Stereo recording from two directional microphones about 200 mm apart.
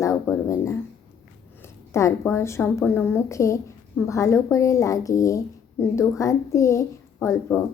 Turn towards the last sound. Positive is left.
turn(degrees=10)  # may be behind; listen again after turning